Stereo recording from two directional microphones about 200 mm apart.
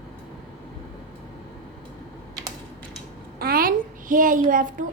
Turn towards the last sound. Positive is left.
turn(degrees=-40)  # may be behind; listen again after turning